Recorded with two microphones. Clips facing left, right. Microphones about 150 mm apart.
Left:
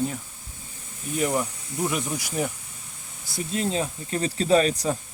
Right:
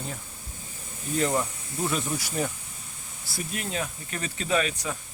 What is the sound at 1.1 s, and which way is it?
Speech, 10° left (ahead or behind).